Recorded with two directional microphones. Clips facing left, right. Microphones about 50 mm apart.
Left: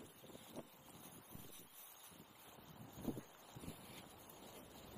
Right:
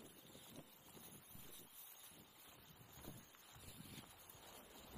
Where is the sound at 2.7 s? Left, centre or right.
Left.